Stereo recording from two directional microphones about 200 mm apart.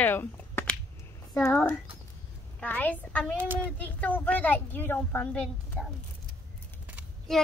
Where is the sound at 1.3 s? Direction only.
5° left (ahead or behind).